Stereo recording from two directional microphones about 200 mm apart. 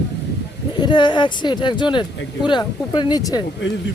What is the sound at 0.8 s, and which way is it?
Speech, 25° left (ahead or behind).